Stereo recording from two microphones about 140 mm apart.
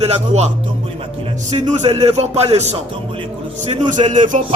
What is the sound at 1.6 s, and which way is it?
Speech, 55° right (ahead or behind).